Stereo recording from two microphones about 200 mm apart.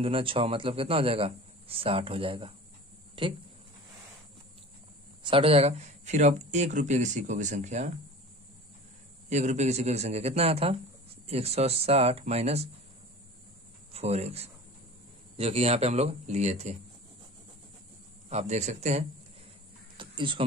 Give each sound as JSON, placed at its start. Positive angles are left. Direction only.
{"t": 0.0, "sound": "a man's voice", "side_deg": -25}
{"t": 5.2, "sound": "speech", "side_deg": -25}
{"t": 9.3, "sound": "speech", "side_deg": -35}
{"t": 13.9, "sound": "speech", "side_deg": -30}
{"t": 18.3, "sound": "speech", "side_deg": -35}
{"t": 20.0, "sound": "a sound", "side_deg": -25}